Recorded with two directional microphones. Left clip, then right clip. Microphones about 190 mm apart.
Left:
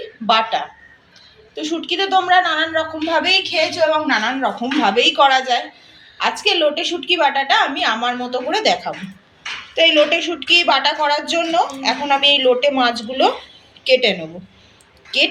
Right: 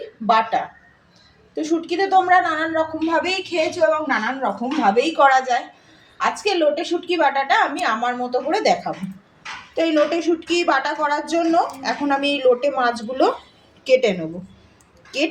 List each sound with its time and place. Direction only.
0.3 s a woman's voice: 50° right (ahead or behind)
4.0 s speech: 30° right (ahead or behind)
4.9 s a woman's voice: 45° right (ahead or behind)